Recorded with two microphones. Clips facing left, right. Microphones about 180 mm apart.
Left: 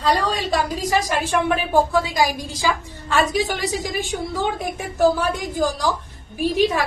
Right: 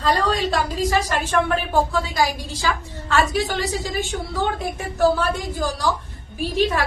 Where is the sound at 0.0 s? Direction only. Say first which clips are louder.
Even; 15° left (ahead or behind).